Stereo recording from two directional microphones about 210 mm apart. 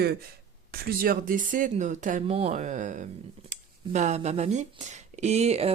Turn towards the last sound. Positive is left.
turn(degrees=-30)  # may be behind; listen again after turning